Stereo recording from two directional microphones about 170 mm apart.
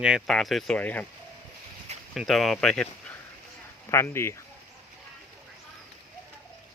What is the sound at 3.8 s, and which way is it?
Speech, 15° left (ahead or behind).